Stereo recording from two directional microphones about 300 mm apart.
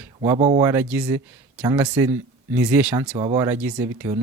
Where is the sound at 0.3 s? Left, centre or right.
Right.